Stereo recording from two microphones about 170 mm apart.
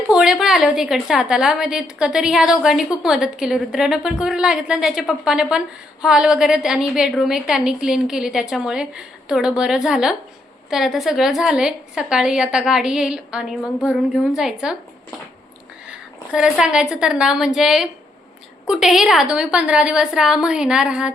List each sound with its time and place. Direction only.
0.1 s a woman's voice: 5° right (ahead or behind)
15.9 s a woman's voice: 5° right (ahead or behind)